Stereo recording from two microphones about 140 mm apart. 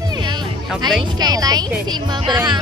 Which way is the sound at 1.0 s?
30° right (ahead or behind).